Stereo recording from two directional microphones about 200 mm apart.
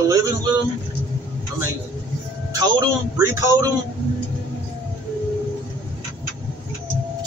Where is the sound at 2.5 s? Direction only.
20° right (ahead or behind).